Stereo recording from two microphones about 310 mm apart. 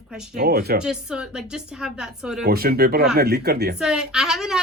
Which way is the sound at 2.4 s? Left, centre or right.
Right.